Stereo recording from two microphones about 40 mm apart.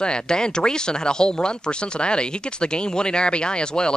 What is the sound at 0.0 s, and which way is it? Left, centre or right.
Speech, left.